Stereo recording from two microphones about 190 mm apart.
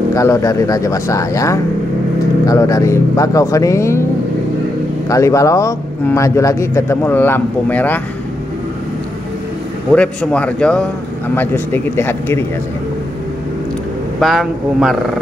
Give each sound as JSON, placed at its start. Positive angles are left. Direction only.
{"t": 0.1, "sound": "speech", "side_deg": 15}
{"t": 5.0, "sound": "speech", "side_deg": 15}
{"t": 9.9, "sound": "a man's voice", "side_deg": 5}
{"t": 14.2, "sound": "a man's voice", "side_deg": 0}